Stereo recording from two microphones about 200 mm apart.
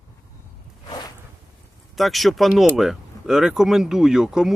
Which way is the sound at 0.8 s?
20° left (ahead or behind).